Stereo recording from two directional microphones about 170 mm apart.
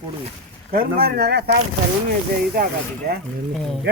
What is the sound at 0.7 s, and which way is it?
Speech, 60° right (ahead or behind).